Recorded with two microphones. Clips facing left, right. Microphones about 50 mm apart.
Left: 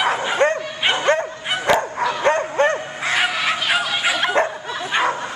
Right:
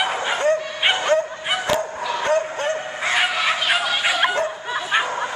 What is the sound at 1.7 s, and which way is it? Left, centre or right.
Bow-wow, left.